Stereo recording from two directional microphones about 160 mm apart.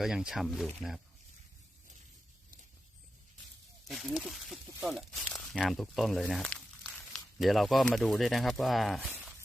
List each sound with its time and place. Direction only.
0.0 s speech: 5° right (ahead or behind)
3.8 s speech: centre (ahead or behind)